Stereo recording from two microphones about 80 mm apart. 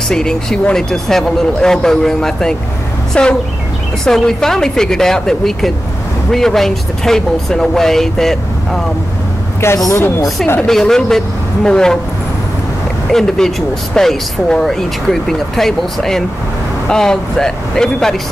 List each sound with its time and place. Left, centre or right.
0.1 s speech: centre
9.8 s speech: left
10.7 s speech: centre
13.1 s speech: centre